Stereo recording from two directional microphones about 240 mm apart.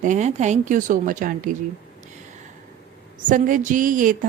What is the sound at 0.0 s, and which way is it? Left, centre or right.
Speech, right.